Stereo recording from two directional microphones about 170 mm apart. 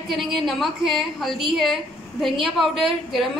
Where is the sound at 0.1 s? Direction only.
Centre (ahead or behind).